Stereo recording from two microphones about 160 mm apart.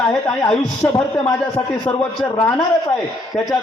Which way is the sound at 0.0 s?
5° left (ahead or behind).